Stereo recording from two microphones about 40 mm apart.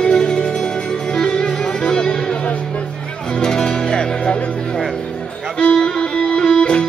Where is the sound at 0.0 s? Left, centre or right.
Left.